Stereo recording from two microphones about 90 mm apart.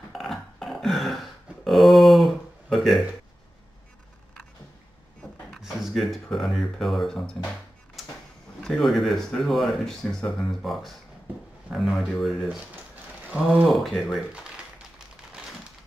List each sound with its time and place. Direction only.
0.1 s a sound: 5° left (ahead or behind)
5.6 s speech: 5° right (ahead or behind)
8.6 s speech: 5° left (ahead or behind)
13.3 s speech: 15° right (ahead or behind)
13.7 s speech: centre (ahead or behind)